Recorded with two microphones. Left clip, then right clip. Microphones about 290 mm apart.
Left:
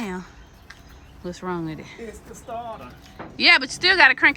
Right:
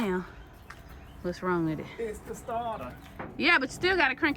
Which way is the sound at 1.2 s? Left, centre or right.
Centre.